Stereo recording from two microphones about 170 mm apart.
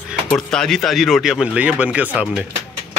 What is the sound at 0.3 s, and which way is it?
Speech, 5° left (ahead or behind).